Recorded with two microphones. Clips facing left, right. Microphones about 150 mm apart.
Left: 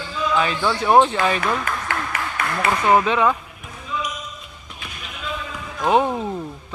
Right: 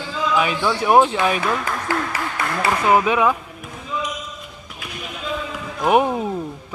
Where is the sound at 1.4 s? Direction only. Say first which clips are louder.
Right 1 dB; 35° right (ahead or behind).